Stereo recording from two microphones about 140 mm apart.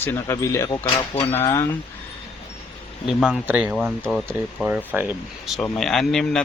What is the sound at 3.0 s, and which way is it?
Speech, 5° right (ahead or behind).